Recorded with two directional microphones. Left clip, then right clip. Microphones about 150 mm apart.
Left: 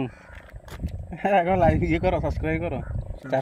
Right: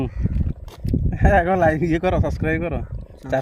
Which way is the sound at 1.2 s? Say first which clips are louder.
Right 3 dB; 90° right.